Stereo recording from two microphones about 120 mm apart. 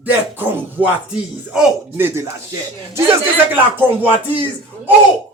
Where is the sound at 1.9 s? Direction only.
20° right (ahead or behind).